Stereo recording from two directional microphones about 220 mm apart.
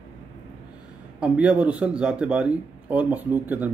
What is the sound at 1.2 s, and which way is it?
A man's voice, 5° right (ahead or behind).